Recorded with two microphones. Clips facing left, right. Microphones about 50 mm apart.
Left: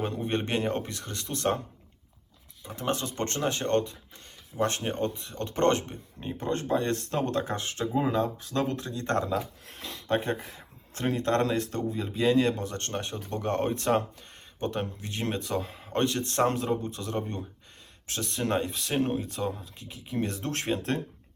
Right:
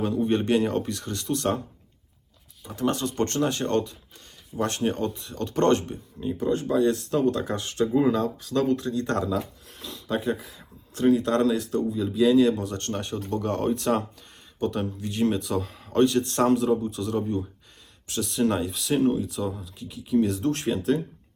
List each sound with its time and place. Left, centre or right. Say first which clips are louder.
0.3 s speech: right 5 dB; left
2.6 s speech: right 4 dB; left
4.5 s speech: even; centre
4.9 s speech: right 3 dB; left
9.7 s speech: left 1 dB; left